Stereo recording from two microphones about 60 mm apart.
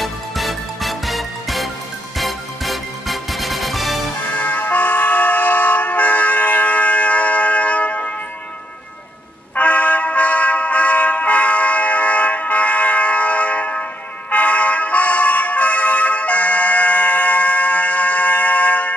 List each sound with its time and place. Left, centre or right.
0.0 s music: centre
4.3 s vehicle: left
9.6 s music: left
14.3 s vehicle: left